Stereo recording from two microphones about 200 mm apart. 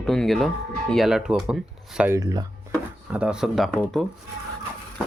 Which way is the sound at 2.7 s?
5° right (ahead or behind).